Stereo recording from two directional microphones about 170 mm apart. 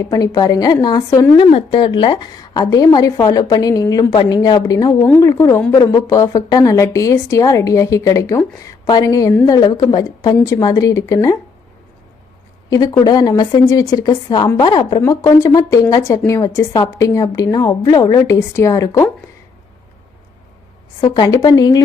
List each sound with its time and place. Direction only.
0.0 s a woman's voice: 20° left (ahead or behind)
1.4 s a woman's voice: 30° left (ahead or behind)
12.7 s a woman's voice: 25° left (ahead or behind)
21.0 s a woman's voice: 25° left (ahead or behind)